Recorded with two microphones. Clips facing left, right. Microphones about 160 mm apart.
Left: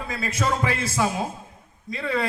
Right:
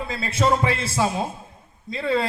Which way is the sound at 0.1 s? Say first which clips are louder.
Right 4 dB; 30° right (ahead or behind).